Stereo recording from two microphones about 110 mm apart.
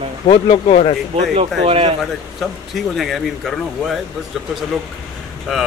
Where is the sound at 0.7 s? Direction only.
90° left.